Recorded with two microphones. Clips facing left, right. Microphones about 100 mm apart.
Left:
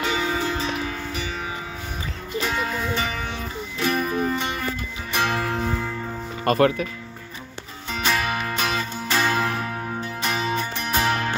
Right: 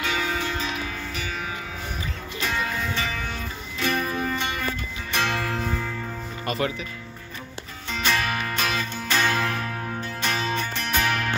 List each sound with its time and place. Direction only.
0.0 s music: 25° left (ahead or behind)
2.4 s music: 25° left (ahead or behind)
6.4 s speech: 55° left (ahead or behind)
7.9 s music: 15° left (ahead or behind)
11.0 s music: 25° left (ahead or behind)